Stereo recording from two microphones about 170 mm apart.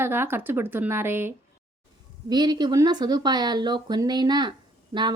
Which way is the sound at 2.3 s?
25° right (ahead or behind).